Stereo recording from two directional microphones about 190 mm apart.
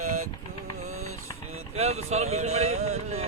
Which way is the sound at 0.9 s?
90° right.